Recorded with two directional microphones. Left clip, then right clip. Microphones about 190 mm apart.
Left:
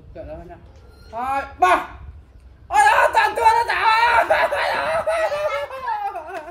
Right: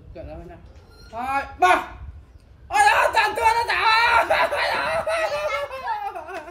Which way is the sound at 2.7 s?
10° left (ahead or behind).